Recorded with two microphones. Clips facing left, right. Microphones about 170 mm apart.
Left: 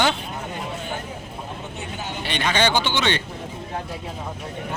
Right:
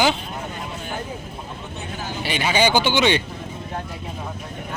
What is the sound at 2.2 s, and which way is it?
A man's voice, 5° right (ahead or behind).